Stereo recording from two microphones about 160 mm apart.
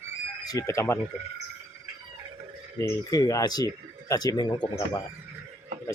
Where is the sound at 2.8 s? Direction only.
20° left (ahead or behind).